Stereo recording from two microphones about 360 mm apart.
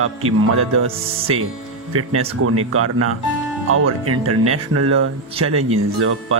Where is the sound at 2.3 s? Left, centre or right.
Right.